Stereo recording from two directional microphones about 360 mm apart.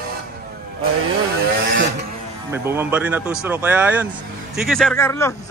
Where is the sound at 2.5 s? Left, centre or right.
Centre.